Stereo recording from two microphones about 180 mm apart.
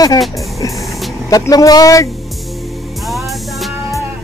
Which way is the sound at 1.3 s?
20° left (ahead or behind).